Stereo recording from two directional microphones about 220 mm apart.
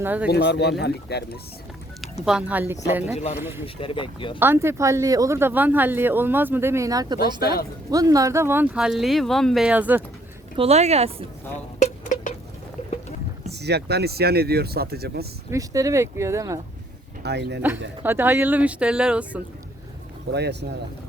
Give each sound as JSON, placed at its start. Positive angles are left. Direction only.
{"t": 0.0, "sound": "speech", "side_deg": -10}
{"t": 0.3, "sound": "speech", "side_deg": 50}
{"t": 2.2, "sound": "speech", "side_deg": -5}
{"t": 3.8, "sound": "speech", "side_deg": 25}
{"t": 4.4, "sound": "speech", "side_deg": -10}
{"t": 7.4, "sound": "speech", "side_deg": 45}
{"t": 7.9, "sound": "speech", "side_deg": -15}
{"t": 10.6, "sound": "speech", "side_deg": -30}
{"t": 11.8, "sound": "a sound", "side_deg": 35}
{"t": 13.5, "sound": "speech", "side_deg": -50}
{"t": 15.4, "sound": "speech", "side_deg": -15}
{"t": 17.2, "sound": "speech", "side_deg": -50}
{"t": 18.0, "sound": "speech", "side_deg": -10}
{"t": 20.3, "sound": "speech", "side_deg": -50}